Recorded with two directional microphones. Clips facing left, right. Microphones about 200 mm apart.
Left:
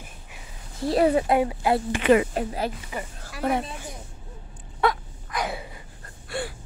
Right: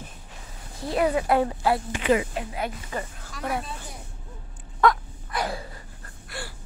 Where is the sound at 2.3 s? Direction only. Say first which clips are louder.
Left 3 dB; 35° left (ahead or behind).